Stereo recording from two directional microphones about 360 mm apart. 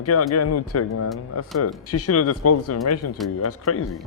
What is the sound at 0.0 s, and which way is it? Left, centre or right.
Speech, left.